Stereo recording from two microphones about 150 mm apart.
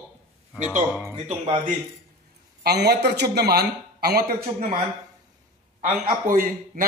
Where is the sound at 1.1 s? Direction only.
35° right (ahead or behind).